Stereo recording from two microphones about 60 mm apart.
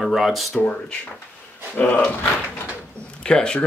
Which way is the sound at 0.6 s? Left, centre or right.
Centre.